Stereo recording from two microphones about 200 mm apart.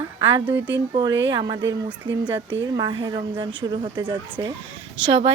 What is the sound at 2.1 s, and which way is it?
Speech, 65° right (ahead or behind).